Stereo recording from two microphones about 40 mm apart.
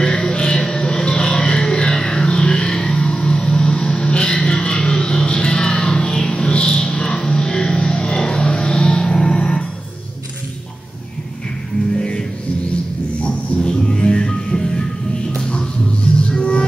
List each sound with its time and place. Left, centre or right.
0.0 s music: centre
11.9 s music: left
13.2 s music: left